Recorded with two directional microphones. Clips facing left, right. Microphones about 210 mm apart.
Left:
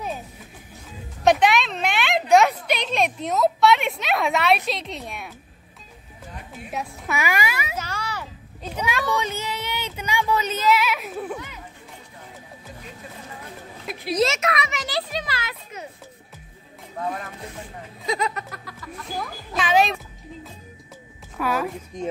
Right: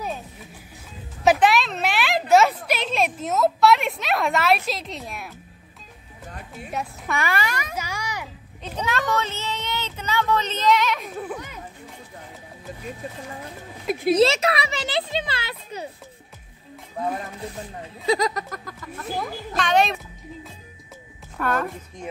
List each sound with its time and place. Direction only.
1.2 s a sound: 5° right (ahead or behind)
6.7 s speech: 5° left (ahead or behind)
7.7 s a sound: 10° right (ahead or behind)
8.6 s speech: 10° left (ahead or behind)
14.1 s a child's voice: 30° right (ahead or behind)
18.0 s a child's voice: 35° right (ahead or behind)
19.5 s speech: centre (ahead or behind)
21.4 s speech: 5° left (ahead or behind)